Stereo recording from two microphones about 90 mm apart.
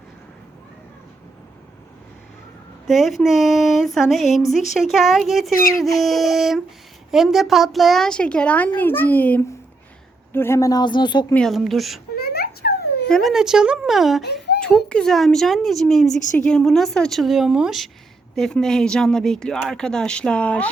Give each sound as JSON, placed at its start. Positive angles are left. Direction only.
{"t": 2.8, "sound": "a woman's voice", "side_deg": 0}
{"t": 10.7, "sound": "speech", "side_deg": 55}
{"t": 11.3, "sound": "a woman's voice", "side_deg": 0}
{"t": 13.1, "sound": "speech", "side_deg": 5}
{"t": 13.3, "sound": "a woman's voice", "side_deg": -5}
{"t": 18.3, "sound": "a woman's voice", "side_deg": 5}